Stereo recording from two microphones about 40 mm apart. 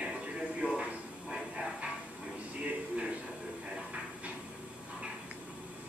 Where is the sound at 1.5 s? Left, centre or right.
Right.